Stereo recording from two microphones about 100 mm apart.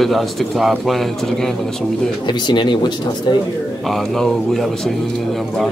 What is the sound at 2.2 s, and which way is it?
Speech, 50° left (ahead or behind).